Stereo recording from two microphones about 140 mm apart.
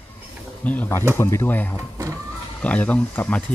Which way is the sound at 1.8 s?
25° right (ahead or behind).